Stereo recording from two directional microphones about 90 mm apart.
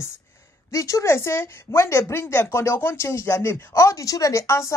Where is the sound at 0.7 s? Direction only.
35° left (ahead or behind).